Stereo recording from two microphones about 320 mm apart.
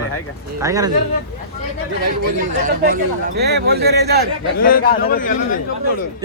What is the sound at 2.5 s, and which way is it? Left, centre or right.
A man's voice, right.